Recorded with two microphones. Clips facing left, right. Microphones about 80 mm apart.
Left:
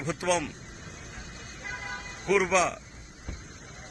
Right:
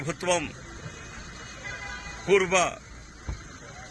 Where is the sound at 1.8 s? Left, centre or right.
Centre.